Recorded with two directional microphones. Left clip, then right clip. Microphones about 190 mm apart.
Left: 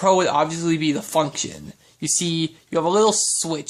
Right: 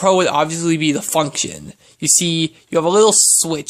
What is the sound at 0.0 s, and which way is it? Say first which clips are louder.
Speech: right 3 dB; 35° right (ahead or behind).